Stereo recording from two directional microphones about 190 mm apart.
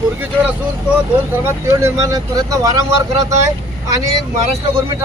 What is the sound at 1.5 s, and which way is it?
A man's voice, 15° right (ahead or behind).